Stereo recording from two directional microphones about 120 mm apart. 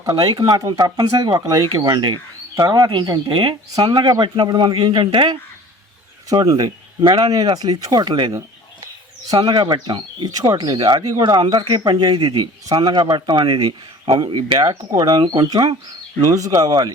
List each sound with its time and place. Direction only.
0.0 s speech: 30° right (ahead or behind)
6.2 s speech: 30° right (ahead or behind)
9.3 s speech: 35° right (ahead or behind)